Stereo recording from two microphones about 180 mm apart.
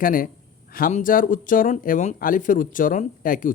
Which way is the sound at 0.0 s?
50° left (ahead or behind).